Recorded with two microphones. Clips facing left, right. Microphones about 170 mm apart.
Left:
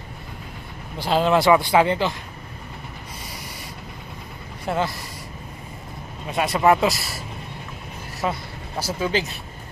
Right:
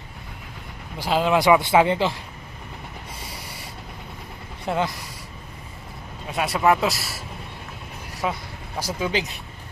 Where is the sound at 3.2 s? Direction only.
30° right (ahead or behind).